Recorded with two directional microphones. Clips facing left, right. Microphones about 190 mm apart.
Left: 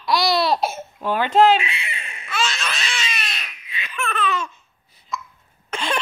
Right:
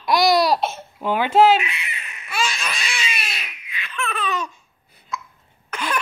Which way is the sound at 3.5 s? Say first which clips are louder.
Even; 35° left (ahead or behind).